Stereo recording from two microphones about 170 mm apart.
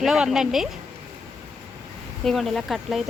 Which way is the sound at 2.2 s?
Centre (ahead or behind).